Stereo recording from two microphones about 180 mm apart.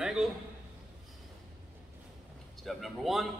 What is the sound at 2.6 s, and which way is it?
Speech, centre (ahead or behind).